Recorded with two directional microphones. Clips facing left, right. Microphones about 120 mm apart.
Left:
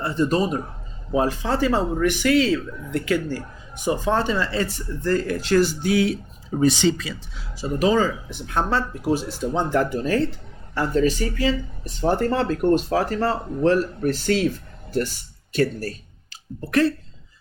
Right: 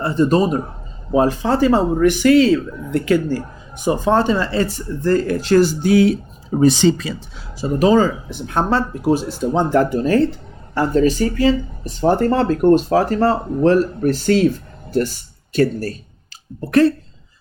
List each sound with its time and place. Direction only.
0.0 s speech: 40° right (ahead or behind)